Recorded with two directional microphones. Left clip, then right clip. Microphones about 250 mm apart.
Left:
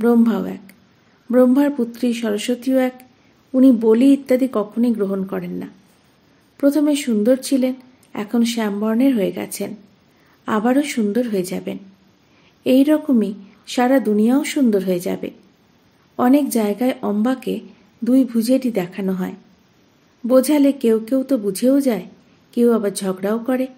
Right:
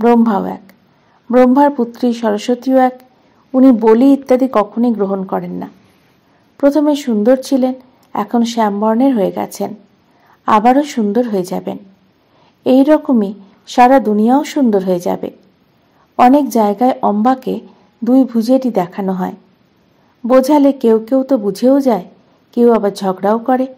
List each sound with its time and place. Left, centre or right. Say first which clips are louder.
0.0 s speech: right 6 dB; centre